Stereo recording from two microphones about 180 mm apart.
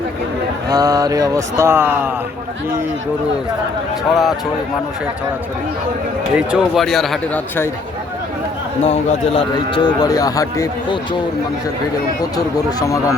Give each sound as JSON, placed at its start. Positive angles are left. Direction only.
{"t": 0.7, "sound": "speech", "side_deg": -20}
{"t": 4.1, "sound": "speech", "side_deg": 0}
{"t": 6.3, "sound": "speech", "side_deg": -5}
{"t": 8.8, "sound": "a man's voice", "side_deg": 30}
{"t": 12.5, "sound": "speech", "side_deg": 15}